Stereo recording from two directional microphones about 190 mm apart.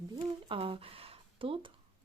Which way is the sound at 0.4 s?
30° right (ahead or behind).